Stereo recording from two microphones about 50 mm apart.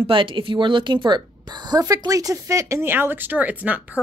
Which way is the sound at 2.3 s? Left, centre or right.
Right.